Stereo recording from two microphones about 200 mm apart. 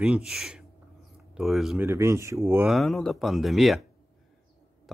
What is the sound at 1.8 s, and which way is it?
Speech, 15° right (ahead or behind).